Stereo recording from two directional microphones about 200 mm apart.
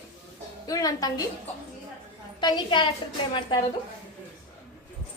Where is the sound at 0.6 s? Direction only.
15° left (ahead or behind).